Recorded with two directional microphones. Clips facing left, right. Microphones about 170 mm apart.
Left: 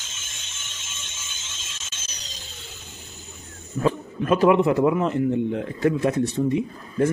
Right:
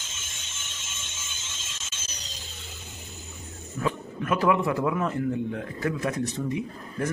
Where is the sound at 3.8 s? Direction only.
25° left (ahead or behind).